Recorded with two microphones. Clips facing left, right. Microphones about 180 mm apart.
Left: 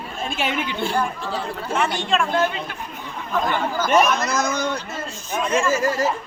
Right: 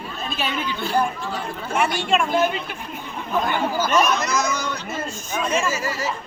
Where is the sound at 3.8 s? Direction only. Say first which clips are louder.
Left 3 dB; 20° left (ahead or behind).